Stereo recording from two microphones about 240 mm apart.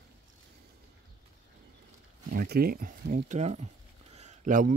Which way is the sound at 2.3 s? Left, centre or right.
Right.